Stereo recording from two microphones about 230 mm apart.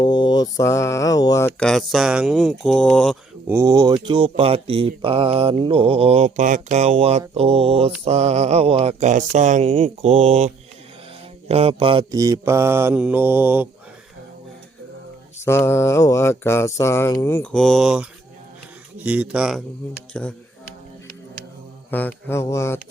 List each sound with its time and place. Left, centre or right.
0.0 s speech: centre
3.4 s speech: centre; by 10.5 s right
11.4 s mantra: right; by 13.7 s centre
15.4 s speech: centre
21.8 s speech: centre